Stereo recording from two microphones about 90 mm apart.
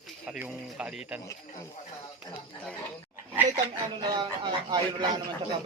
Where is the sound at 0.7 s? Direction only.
10° right (ahead or behind).